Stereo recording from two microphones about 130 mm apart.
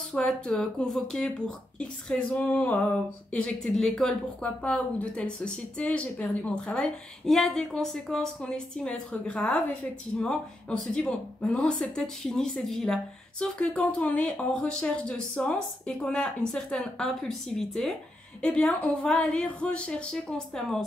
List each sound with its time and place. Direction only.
0.1 s a woman's voice: 5° left (ahead or behind)